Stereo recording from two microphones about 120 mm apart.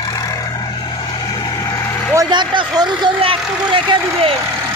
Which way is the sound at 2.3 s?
40° right (ahead or behind).